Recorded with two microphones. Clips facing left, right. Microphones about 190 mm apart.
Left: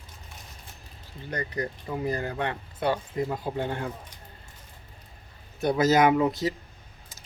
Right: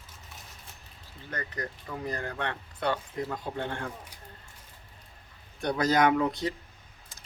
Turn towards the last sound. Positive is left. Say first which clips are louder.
# left 3 dB
turn(degrees=0)  # may be behind; listen again after turning